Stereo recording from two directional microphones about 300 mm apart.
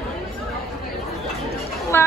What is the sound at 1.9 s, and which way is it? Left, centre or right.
Speech, centre.